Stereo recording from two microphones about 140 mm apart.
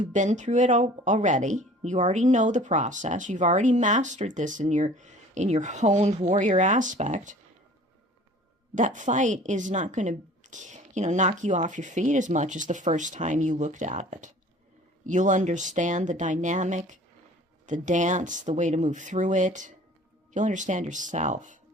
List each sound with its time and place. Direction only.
0.0 s speech: 60° right (ahead or behind)
8.7 s speech: 65° right (ahead or behind)